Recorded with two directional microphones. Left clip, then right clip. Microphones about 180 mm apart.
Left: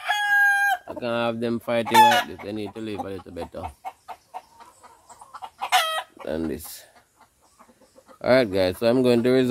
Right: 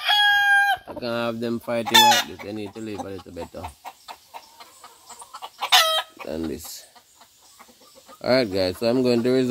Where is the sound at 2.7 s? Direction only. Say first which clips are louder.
Left 1 dB; centre (ahead or behind).